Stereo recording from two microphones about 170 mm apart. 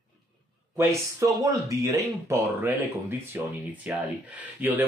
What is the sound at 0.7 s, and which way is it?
Speech, 20° right (ahead or behind).